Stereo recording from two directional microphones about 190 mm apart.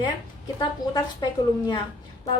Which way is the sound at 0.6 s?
25° left (ahead or behind).